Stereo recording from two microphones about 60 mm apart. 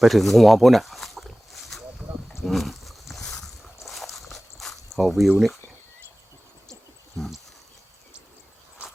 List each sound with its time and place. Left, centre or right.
0.0 s speech: centre
2.4 s a sound: centre
4.9 s speech: centre